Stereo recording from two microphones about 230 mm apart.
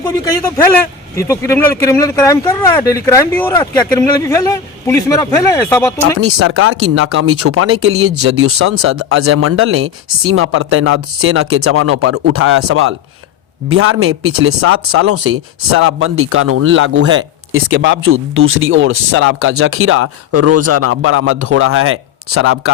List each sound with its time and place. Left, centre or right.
0.0 s speech: centre
6.1 s speech: right